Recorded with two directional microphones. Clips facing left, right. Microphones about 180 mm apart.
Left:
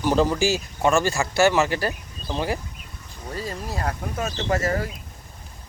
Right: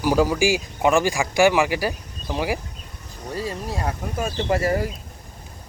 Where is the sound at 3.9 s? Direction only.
10° right (ahead or behind).